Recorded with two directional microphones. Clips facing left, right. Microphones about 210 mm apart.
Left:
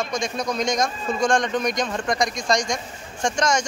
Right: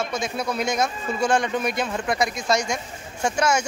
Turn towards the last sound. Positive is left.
turn(degrees=-5)  # may be behind; listen again after turning